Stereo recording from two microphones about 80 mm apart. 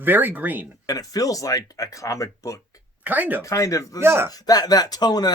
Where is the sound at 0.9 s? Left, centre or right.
Left.